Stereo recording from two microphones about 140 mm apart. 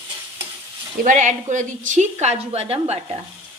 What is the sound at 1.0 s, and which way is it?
A woman's voice, 65° right (ahead or behind).